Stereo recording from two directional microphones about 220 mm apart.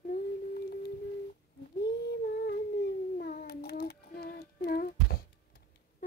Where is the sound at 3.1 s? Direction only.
40° left (ahead or behind).